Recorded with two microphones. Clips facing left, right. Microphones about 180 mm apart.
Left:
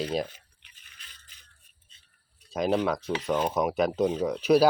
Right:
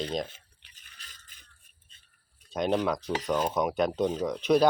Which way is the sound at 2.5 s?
5° left (ahead or behind).